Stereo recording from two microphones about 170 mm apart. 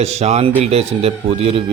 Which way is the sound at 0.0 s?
40° right (ahead or behind).